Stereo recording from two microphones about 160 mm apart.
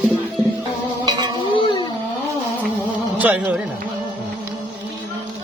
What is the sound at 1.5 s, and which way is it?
Music, 30° left (ahead or behind).